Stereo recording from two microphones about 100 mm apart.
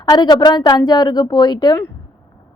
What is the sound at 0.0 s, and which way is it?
A woman's voice, 45° left (ahead or behind).